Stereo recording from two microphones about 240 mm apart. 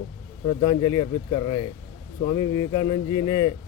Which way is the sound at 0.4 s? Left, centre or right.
Centre.